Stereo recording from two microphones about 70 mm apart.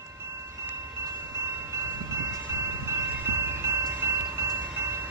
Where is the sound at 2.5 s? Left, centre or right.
Right.